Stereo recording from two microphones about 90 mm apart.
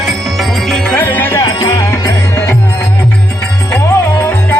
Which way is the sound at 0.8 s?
20° left (ahead or behind).